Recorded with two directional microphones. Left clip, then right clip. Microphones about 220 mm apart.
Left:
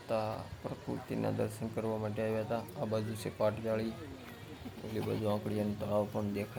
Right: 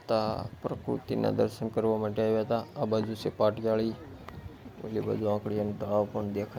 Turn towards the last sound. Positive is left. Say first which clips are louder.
# right 5 dB
turn(degrees=-15)  # may be behind; listen again after turning